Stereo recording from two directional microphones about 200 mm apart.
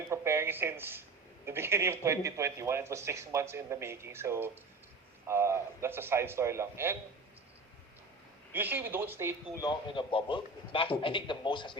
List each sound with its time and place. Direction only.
0.1 s a sound: 10° right (ahead or behind)
1.5 s speech: 15° right (ahead or behind)
8.5 s speech: 10° right (ahead or behind)
9.6 s a man's voice: 20° left (ahead or behind)